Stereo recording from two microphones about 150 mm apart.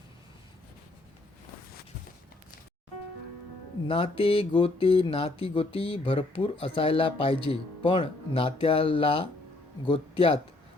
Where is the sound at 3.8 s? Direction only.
35° left (ahead or behind).